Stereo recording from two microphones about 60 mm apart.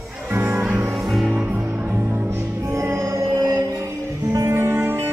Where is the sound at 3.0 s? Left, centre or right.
Right.